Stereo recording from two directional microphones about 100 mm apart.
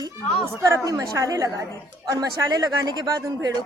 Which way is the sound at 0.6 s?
35° right (ahead or behind).